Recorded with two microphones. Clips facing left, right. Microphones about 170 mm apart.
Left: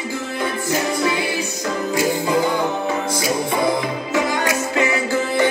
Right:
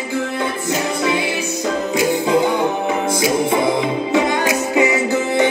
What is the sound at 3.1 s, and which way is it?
Music, 20° right (ahead or behind).